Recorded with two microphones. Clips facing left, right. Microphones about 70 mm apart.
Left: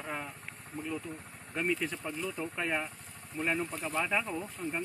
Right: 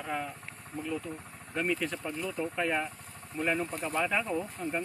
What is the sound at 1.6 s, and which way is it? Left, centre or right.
Speech, centre.